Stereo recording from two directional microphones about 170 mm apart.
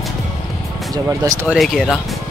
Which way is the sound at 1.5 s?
Centre (ahead or behind).